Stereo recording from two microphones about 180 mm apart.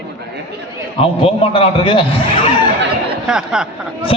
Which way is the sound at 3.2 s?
5° right (ahead or behind).